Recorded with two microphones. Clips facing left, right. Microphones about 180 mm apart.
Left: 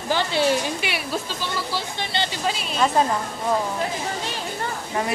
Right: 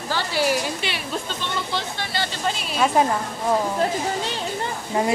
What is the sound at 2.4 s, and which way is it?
Speech, centre (ahead or behind).